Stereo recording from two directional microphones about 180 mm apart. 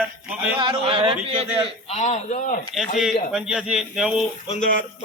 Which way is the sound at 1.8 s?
35° left (ahead or behind).